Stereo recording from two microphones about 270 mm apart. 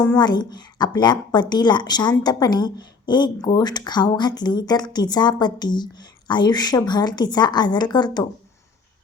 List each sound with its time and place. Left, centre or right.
0.0 s a woman's voice: centre